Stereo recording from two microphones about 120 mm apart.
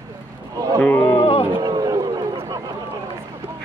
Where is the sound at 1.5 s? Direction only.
35° right (ahead or behind).